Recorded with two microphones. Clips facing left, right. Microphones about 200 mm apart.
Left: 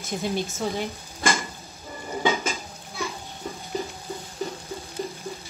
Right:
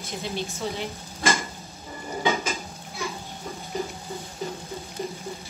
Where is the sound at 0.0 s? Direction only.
50° left (ahead or behind).